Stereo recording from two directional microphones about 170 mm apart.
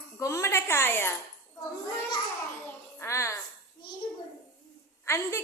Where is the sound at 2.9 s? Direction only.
15° left (ahead or behind).